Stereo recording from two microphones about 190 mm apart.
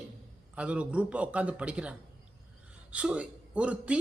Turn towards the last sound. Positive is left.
turn(degrees=-5)  # may be behind; listen again after turning